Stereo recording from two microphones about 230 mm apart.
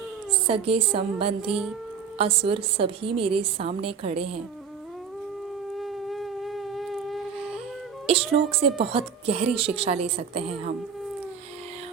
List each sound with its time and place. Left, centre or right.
0.4 s a woman's voice: right
1.5 s speech: centre
2.1 s a woman's voice: right
5.7 s a sound: centre
8.0 s a woman's voice: right